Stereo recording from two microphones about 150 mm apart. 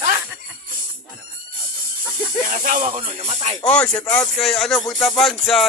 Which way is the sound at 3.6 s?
5° left (ahead or behind).